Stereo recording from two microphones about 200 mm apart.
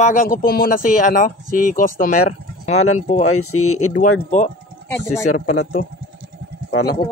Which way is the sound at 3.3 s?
90° left.